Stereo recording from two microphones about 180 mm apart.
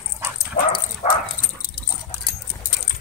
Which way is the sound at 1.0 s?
35° left (ahead or behind).